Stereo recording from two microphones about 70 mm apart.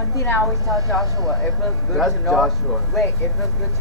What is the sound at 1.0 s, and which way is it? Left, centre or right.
Speech, right.